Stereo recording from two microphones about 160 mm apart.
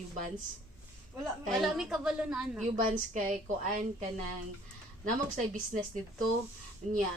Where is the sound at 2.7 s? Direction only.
55° right (ahead or behind).